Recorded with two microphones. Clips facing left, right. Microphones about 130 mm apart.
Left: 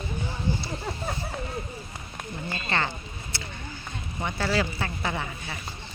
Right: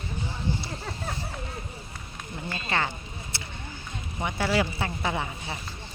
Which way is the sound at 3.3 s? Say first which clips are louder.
Left 3 dB; 25° right (ahead or behind).